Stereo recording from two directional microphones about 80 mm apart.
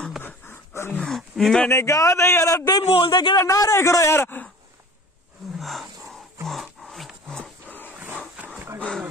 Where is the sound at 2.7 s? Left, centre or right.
Left.